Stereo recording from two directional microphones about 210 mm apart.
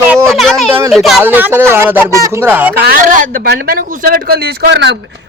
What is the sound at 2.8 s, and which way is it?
A man's voice, 40° right (ahead or behind).